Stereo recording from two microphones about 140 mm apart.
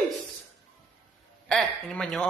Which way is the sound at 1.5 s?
5° left (ahead or behind).